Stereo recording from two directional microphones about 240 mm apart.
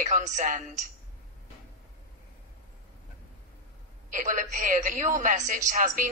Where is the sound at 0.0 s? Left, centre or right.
Right.